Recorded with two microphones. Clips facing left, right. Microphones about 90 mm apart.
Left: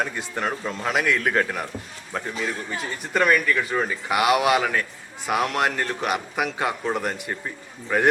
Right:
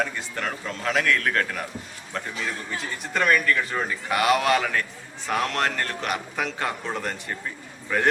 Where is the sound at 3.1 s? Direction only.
5° left (ahead or behind).